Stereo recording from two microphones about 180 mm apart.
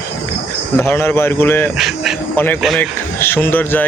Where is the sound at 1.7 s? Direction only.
Centre (ahead or behind).